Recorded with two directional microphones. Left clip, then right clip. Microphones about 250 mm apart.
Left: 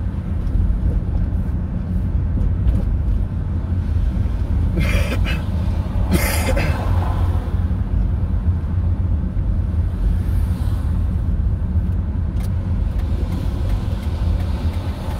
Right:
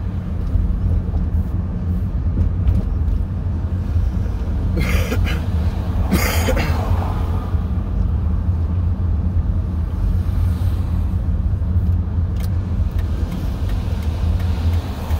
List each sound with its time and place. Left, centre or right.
4.7 s cough: centre